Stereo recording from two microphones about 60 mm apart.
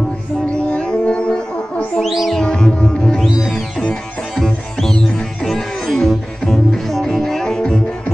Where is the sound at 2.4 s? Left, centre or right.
Centre.